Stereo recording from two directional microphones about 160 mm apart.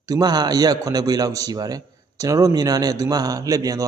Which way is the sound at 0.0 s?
25° right (ahead or behind).